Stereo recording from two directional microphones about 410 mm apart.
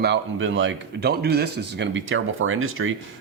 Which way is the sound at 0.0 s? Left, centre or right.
Right.